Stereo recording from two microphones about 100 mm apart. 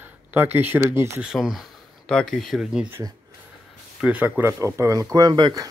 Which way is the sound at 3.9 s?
15° right (ahead or behind).